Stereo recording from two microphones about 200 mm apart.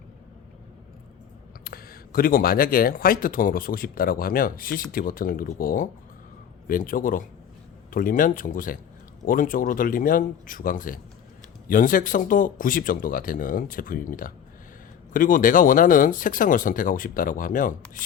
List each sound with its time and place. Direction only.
1.6 s speech: 50° left (ahead or behind)